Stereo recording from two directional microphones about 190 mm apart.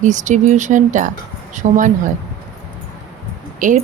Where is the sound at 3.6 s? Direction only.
45° right (ahead or behind).